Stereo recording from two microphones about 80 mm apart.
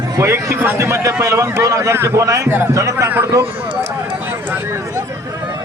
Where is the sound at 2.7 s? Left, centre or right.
Right.